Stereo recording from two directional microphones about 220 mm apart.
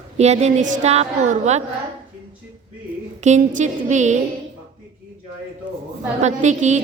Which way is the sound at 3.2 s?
35° right (ahead or behind).